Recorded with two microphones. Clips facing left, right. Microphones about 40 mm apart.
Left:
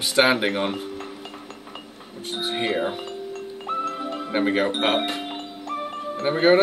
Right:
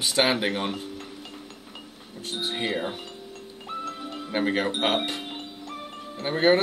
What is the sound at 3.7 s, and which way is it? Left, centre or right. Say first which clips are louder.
Music: left 7 dB; centre.